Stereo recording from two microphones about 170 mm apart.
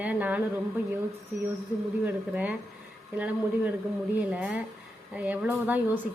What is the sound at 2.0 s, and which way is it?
Speech, 10° right (ahead or behind).